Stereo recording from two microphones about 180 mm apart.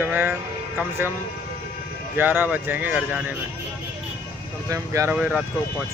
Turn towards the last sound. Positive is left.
turn(degrees=-5)  # may be behind; listen again after turning